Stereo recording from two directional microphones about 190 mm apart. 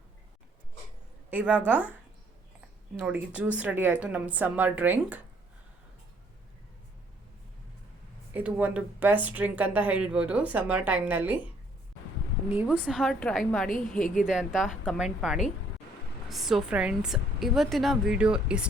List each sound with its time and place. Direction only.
1.3 s speech: 10° right (ahead or behind)
3.0 s speech: 10° right (ahead or behind)
8.3 s speech: 10° right (ahead or behind)
12.5 s a woman's voice: 10° right (ahead or behind)
13.7 s a woman's voice: 45° left (ahead or behind)
14.3 s a woman's voice: 5° right (ahead or behind)
16.3 s a woman's voice: centre (ahead or behind)